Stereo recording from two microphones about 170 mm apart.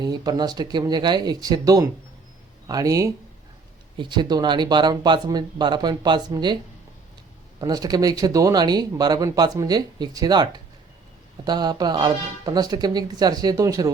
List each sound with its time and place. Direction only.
0.0 s speech: 25° right (ahead or behind)
7.6 s speech: 20° right (ahead or behind)